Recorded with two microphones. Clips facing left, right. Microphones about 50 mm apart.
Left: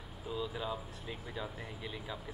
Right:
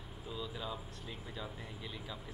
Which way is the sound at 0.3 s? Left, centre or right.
Centre.